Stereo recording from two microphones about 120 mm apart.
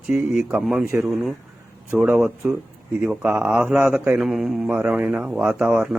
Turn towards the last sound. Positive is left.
turn(degrees=-10)  # may be behind; listen again after turning